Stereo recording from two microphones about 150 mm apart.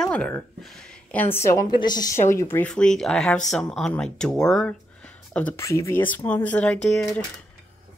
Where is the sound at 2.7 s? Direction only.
5° left (ahead or behind).